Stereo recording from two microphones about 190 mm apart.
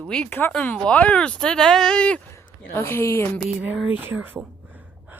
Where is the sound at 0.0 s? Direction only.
5° left (ahead or behind).